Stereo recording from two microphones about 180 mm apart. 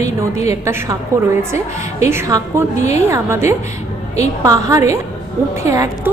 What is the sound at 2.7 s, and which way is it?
Speech, 40° left (ahead or behind).